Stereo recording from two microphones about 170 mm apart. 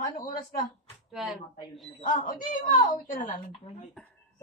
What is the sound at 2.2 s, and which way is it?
Speech, 50° left (ahead or behind).